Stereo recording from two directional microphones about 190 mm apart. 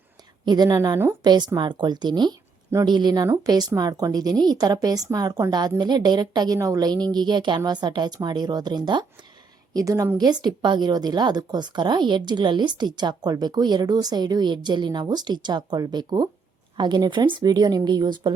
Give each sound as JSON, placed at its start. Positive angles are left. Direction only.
{"t": 0.4, "sound": "a woman's voice", "side_deg": -20}